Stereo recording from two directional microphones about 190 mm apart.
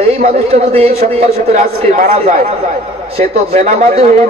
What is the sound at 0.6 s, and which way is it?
A man's voice, 30° right (ahead or behind).